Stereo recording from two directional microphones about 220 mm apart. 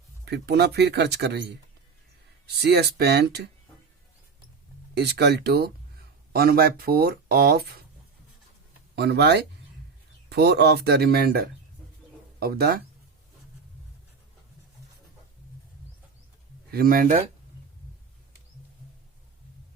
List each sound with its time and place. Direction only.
0.3 s speech: 50° right (ahead or behind)
2.6 s speech: 50° right (ahead or behind)
4.9 s speech: 50° right (ahead or behind)
9.0 s speech: 50° right (ahead or behind)
16.7 s speech: 40° right (ahead or behind)